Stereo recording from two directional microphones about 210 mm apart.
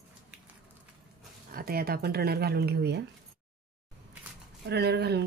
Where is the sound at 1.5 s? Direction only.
45° right (ahead or behind).